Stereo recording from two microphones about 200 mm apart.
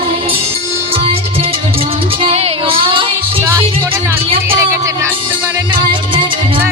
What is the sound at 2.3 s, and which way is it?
Child singing, 30° right (ahead or behind).